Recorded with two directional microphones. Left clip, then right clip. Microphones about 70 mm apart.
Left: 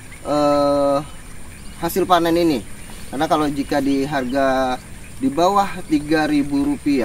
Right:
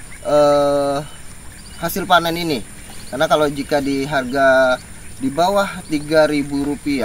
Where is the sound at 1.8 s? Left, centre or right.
Right.